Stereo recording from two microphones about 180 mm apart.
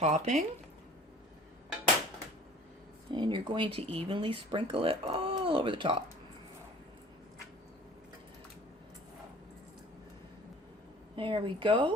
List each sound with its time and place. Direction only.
0.0 s speech: 40° right (ahead or behind)
3.1 s speech: 25° right (ahead or behind)
11.1 s speech: 30° right (ahead or behind)